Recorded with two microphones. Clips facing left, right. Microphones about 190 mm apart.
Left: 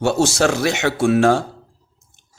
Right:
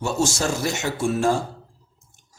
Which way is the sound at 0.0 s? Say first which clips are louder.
Left 7 dB; 70° left (ahead or behind).